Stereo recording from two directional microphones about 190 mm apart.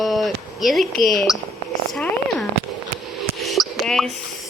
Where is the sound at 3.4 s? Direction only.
Centre (ahead or behind).